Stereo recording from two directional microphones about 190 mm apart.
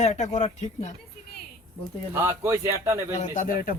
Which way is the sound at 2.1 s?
15° right (ahead or behind).